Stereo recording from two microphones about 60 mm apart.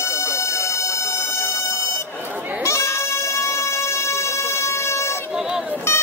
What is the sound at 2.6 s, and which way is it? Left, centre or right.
Music, left.